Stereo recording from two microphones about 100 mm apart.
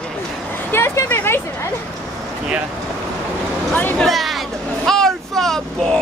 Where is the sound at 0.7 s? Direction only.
25° left (ahead or behind).